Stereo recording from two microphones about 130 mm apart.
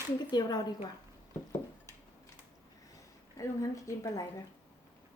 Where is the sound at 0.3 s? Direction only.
35° left (ahead or behind).